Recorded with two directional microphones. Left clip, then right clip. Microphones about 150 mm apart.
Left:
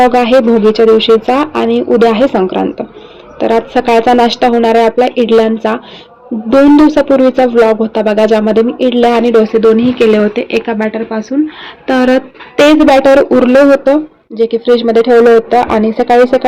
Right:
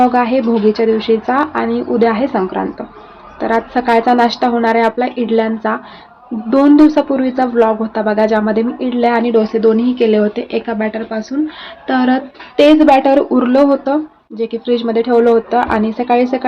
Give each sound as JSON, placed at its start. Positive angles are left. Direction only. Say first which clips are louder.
{"t": 0.1, "sound": "speech", "louder": "left 6 dB", "side_deg": 20}
{"t": 6.5, "sound": "speech", "louder": "left 3 dB", "side_deg": 15}